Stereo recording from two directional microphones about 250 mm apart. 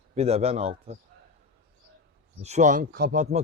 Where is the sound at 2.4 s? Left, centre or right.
Right.